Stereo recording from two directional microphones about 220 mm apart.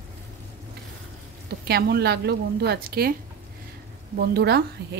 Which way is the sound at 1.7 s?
45° right (ahead or behind).